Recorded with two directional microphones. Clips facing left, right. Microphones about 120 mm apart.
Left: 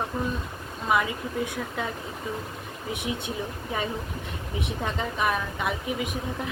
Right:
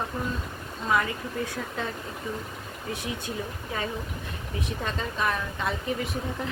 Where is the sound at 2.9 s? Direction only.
20° left (ahead or behind).